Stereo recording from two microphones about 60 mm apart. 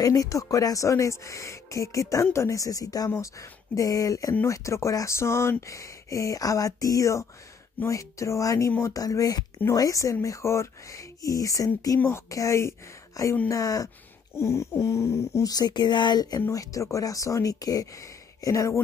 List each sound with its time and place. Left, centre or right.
0.0 s speech: left
4.5 s speech: left
9.7 s speech: left
10.2 s speech: left
11.2 s speech: left
12.3 s speech: left
13.5 s speech: left
14.3 s a sound: left
16.2 s speech: left
16.5 s speech: left
18.4 s speech: left